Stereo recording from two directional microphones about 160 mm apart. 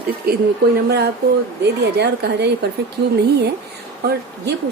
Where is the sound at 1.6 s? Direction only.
90° right.